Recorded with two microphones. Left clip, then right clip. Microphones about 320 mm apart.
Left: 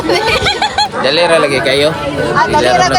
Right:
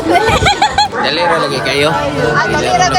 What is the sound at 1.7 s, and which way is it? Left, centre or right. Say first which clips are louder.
Speech: left 1 dB; centre.